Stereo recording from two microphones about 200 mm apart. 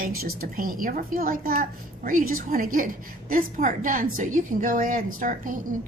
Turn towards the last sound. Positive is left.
turn(degrees=-40)  # may be behind; listen again after turning